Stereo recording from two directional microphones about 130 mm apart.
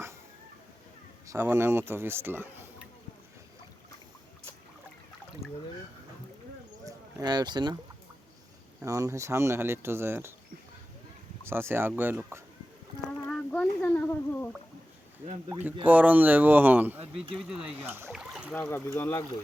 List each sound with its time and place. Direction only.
1.3 s speech: 20° right (ahead or behind)
6.8 s a sound: 30° right (ahead or behind)
8.8 s speech: 25° right (ahead or behind)
11.4 s speech: 20° right (ahead or behind)
13.2 s a sound: 10° left (ahead or behind)
15.5 s speech: 10° right (ahead or behind)
17.8 s speech: 15° right (ahead or behind)
18.1 s rowboat: 5° right (ahead or behind)
18.7 s speech: 20° left (ahead or behind)